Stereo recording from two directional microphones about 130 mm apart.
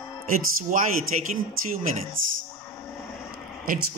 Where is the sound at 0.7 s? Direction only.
70° right (ahead or behind).